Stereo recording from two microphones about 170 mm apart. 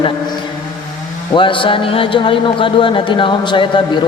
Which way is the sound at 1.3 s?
30° left (ahead or behind).